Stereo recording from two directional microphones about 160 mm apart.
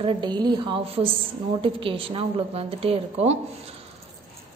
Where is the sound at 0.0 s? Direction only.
30° right (ahead or behind).